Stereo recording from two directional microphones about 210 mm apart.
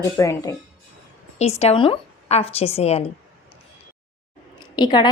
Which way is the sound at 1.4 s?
30° left (ahead or behind).